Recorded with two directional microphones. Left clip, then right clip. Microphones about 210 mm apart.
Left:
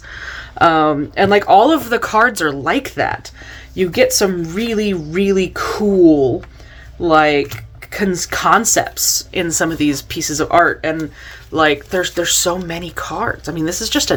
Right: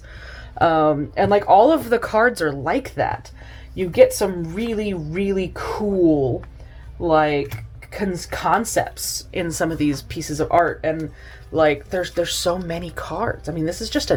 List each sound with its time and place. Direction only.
0.1 s speech: centre (ahead or behind)